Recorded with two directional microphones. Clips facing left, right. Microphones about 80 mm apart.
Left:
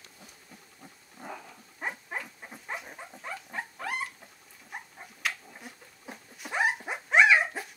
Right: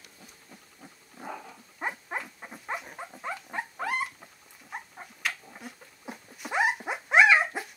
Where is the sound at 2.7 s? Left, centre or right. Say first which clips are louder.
Right 3 dB; centre.